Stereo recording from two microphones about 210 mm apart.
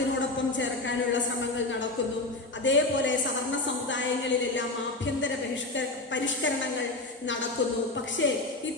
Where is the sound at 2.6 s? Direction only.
60° left (ahead or behind).